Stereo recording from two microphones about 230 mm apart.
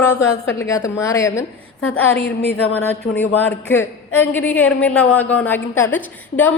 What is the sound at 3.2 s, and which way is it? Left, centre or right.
A man's voice, centre.